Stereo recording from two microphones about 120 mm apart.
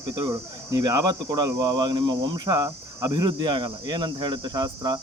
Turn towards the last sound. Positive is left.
turn(degrees=-35)  # may be behind; listen again after turning